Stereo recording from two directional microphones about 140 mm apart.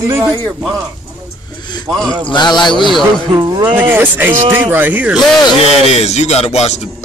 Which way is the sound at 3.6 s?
15° right (ahead or behind).